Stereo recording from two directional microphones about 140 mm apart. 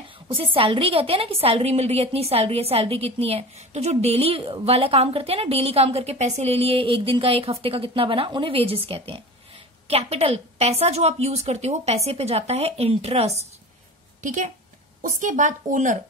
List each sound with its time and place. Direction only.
0.3 s a woman's voice: 40° right (ahead or behind)
14.2 s a woman's voice: 65° right (ahead or behind)